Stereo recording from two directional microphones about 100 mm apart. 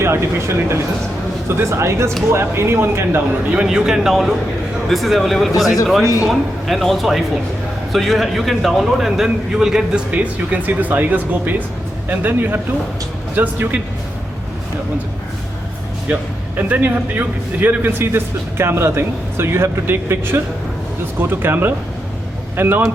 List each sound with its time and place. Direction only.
0.0 s a man's voice: 25° right (ahead or behind)
3.5 s a man's voice: 10° right (ahead or behind)
16.6 s a man's voice: 15° right (ahead or behind)